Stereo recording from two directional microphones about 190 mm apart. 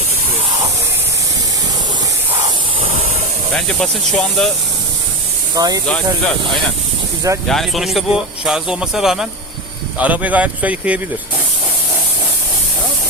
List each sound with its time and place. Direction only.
3.5 s speech: 5° left (ahead or behind)
5.5 s speech: 20° right (ahead or behind)
5.8 s speech: 5° left (ahead or behind)